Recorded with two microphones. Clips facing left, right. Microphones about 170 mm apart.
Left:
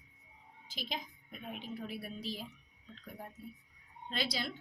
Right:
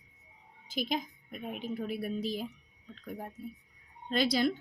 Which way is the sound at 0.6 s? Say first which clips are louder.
Right 9 dB; 50° right (ahead or behind).